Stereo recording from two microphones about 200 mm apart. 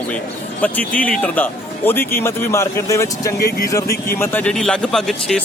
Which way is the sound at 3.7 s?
15° left (ahead or behind).